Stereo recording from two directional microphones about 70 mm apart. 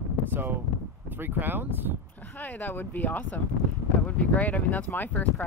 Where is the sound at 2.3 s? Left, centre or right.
Left.